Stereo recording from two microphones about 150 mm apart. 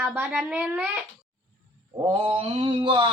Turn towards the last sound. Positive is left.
turn(degrees=-35)  # may be behind; listen again after turning